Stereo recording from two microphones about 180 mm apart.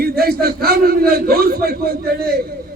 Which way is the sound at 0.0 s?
55° right (ahead or behind).